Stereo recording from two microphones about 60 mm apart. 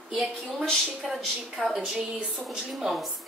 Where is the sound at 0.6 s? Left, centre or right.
Centre.